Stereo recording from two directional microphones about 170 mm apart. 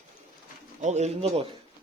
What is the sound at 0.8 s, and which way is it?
Speech, 40° right (ahead or behind).